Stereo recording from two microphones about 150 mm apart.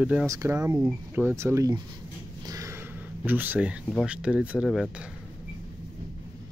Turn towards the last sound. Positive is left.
turn(degrees=-10)  # may be behind; listen again after turning